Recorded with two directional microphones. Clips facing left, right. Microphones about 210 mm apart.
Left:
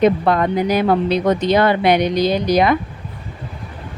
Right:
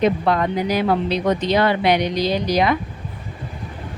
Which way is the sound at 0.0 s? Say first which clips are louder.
Left 3 dB; 50° left (ahead or behind).